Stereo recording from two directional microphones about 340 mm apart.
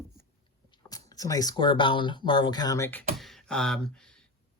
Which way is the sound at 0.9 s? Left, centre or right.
Centre.